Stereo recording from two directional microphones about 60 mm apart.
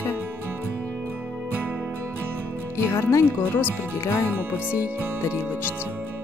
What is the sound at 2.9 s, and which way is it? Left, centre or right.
Speech, left.